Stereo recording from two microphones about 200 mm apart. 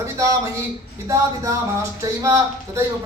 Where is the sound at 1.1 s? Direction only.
15° right (ahead or behind).